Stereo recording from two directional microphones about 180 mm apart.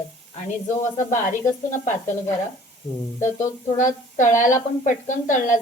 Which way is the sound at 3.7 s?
45° left (ahead or behind).